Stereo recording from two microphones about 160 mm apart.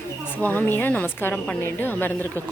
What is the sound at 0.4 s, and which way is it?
A woman's voice, 10° left (ahead or behind).